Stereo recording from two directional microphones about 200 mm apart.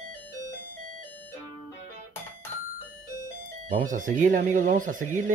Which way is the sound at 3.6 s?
40° right (ahead or behind).